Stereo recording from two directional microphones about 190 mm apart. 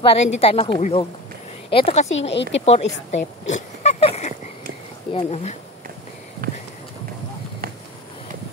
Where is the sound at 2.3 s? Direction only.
65° left (ahead or behind).